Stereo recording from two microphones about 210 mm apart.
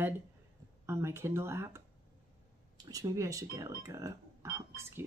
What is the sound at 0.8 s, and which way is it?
Speech, 10° right (ahead or behind).